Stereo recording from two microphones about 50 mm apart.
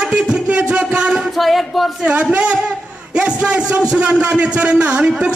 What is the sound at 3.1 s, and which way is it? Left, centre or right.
Crowd, right.